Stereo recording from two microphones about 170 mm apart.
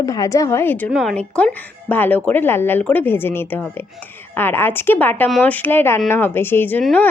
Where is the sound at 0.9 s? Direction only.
Centre (ahead or behind).